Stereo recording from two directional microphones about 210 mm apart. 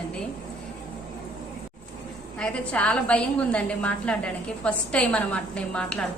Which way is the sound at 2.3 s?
5° left (ahead or behind).